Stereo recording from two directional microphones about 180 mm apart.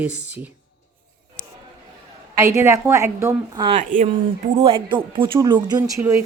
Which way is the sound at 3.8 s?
45° right (ahead or behind).